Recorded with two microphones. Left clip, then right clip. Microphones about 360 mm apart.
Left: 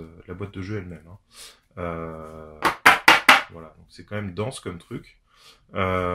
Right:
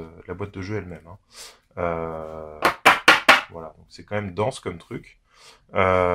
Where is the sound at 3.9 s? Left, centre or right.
Centre.